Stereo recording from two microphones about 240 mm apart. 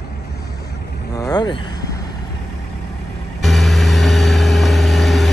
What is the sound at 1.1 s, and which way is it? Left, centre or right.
Speech, centre.